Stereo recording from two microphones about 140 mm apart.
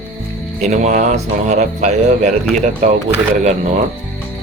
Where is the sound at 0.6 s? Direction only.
60° right (ahead or behind).